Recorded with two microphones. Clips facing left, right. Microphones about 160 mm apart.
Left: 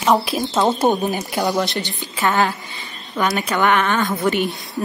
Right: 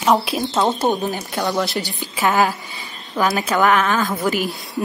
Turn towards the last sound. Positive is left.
turn(degrees=0)  # may be behind; listen again after turning